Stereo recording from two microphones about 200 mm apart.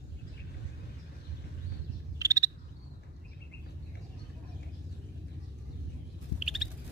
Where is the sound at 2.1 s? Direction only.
15° right (ahead or behind).